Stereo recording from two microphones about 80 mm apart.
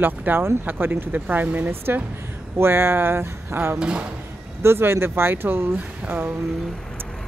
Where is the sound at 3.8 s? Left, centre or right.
Centre.